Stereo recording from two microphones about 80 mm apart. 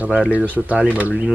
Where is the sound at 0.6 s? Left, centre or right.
Centre.